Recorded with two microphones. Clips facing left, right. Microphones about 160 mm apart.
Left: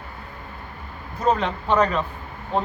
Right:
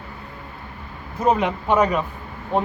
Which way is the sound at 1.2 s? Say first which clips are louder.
Right 2 dB; 10° right (ahead or behind).